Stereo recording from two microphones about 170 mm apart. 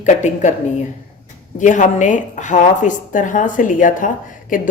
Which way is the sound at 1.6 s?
45° left (ahead or behind).